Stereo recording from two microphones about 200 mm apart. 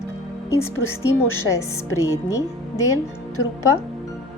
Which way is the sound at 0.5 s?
10° left (ahead or behind).